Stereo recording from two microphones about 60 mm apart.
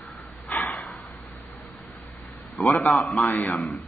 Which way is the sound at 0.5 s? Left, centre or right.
Left.